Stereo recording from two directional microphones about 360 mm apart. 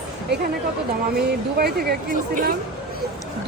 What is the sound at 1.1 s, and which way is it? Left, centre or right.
Speech, right.